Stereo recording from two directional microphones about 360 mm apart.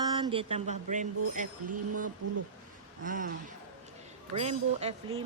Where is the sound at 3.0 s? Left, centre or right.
Right.